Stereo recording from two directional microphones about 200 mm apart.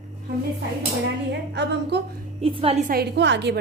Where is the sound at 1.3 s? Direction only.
60° right (ahead or behind).